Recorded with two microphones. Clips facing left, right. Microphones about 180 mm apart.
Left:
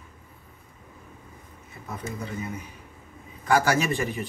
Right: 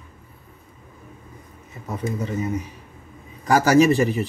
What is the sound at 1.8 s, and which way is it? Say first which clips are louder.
Speech: right 7 dB; 40° right (ahead or behind).